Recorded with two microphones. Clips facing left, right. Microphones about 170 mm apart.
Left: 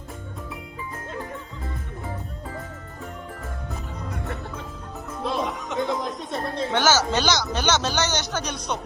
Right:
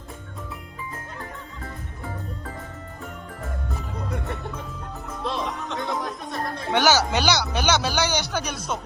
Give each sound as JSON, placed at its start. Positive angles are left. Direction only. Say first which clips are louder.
{"t": 5.2, "sound": "music", "louder": "left 2 dB", "side_deg": 0}
{"t": 5.8, "sound": "music", "louder": "left 4 dB", "side_deg": 15}
{"t": 6.7, "sound": "speech", "louder": "right 2 dB", "side_deg": -15}